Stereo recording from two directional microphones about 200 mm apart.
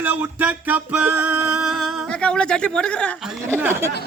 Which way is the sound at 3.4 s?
10° right (ahead or behind).